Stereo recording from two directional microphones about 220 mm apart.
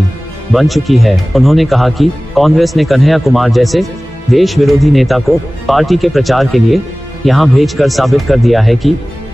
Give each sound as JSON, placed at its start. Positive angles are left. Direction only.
{"t": 0.5, "sound": "speech", "side_deg": 0}